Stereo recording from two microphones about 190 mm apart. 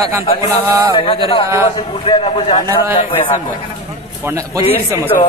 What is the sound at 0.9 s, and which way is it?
A man's voice, 25° left (ahead or behind).